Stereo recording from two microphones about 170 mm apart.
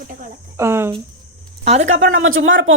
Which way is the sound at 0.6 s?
15° right (ahead or behind).